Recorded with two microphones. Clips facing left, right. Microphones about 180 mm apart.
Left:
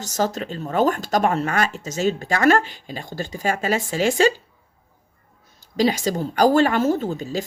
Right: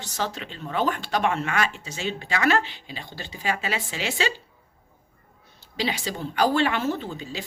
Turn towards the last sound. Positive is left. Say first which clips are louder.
# left 8 dB
turn(degrees=45)  # may be behind; listen again after turning